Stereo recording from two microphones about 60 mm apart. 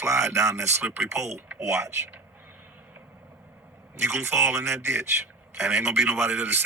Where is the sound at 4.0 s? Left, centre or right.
Right.